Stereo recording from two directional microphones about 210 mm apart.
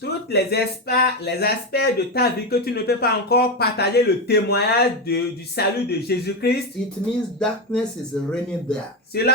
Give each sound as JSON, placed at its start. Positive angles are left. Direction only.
{"t": 0.0, "sound": "speech", "side_deg": 50}
{"t": 7.3, "sound": "speech", "side_deg": 5}